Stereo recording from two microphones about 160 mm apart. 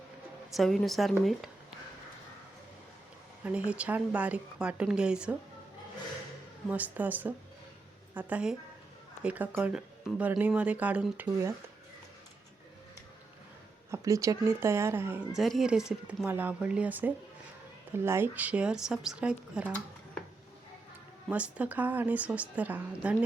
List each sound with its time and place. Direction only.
0.5 s speech: centre (ahead or behind)
3.4 s speech: 10° right (ahead or behind)
6.7 s speech: 10° right (ahead or behind)
13.9 s speech: 20° right (ahead or behind)
15.3 s speech: centre (ahead or behind)
21.2 s speech: 10° right (ahead or behind)